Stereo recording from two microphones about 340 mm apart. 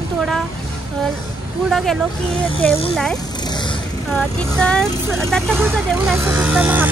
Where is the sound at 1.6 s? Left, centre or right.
Centre.